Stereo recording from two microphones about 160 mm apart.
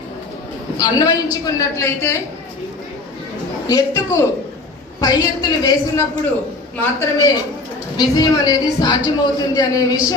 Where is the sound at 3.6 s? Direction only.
20° left (ahead or behind).